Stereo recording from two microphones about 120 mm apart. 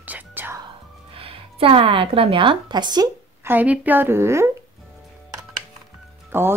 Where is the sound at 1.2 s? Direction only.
50° right (ahead or behind).